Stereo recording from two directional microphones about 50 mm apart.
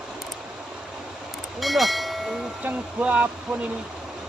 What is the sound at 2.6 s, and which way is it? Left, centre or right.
Speech, right.